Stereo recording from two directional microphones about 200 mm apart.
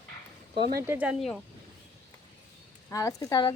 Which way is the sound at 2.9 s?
15° left (ahead or behind).